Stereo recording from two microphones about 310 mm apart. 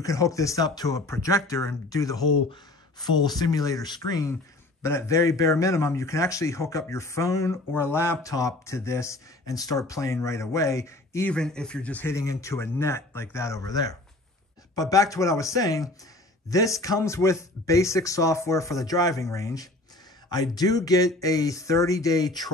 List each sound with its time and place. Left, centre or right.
0.0 s a man's voice: centre